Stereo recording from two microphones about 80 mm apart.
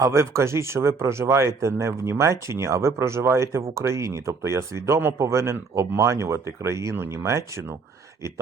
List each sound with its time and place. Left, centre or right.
0.0 s speech: right